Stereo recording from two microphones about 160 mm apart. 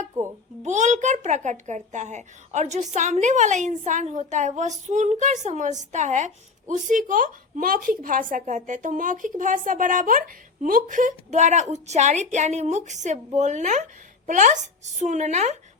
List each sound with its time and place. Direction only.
0.1 s a child's voice: 20° right (ahead or behind)
0.6 s speech: 50° right (ahead or behind)